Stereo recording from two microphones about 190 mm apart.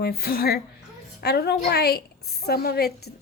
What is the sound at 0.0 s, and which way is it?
A woman's voice, 55° left (ahead or behind).